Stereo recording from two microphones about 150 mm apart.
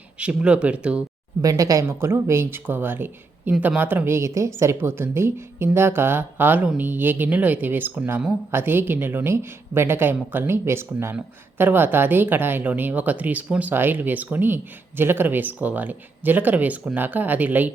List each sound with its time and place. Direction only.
0.2 s a woman's voice: 10° right (ahead or behind)
1.4 s a woman's voice: 25° right (ahead or behind)